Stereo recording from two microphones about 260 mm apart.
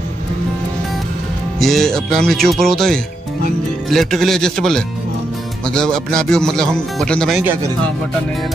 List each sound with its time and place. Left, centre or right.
1.6 s speech: centre